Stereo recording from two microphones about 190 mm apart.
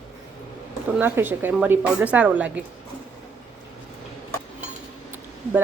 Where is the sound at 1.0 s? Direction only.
10° right (ahead or behind).